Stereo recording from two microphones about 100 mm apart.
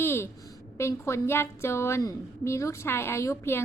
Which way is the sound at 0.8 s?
25° left (ahead or behind).